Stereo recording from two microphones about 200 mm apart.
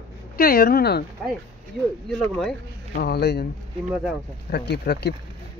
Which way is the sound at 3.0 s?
55° left (ahead or behind).